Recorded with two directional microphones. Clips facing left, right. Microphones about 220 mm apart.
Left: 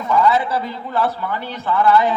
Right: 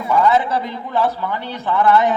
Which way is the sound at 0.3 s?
20° right (ahead or behind).